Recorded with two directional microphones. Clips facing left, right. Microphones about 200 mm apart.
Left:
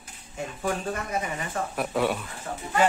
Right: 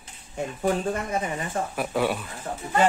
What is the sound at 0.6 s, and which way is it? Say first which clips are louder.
Speech: right 4 dB; 30° right (ahead or behind).